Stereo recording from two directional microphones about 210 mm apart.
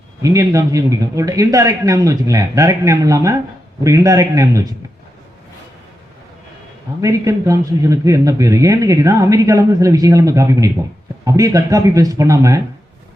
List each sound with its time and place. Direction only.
0.2 s a man's voice: 15° right (ahead or behind)
7.0 s a man's voice: 15° right (ahead or behind)